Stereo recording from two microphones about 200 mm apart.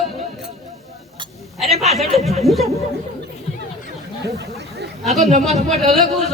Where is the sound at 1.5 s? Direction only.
Centre (ahead or behind).